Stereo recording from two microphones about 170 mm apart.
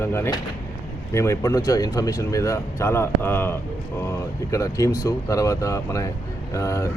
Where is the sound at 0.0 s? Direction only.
15° left (ahead or behind).